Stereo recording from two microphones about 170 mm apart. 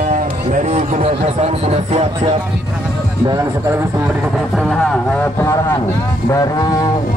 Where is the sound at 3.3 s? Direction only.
15° right (ahead or behind).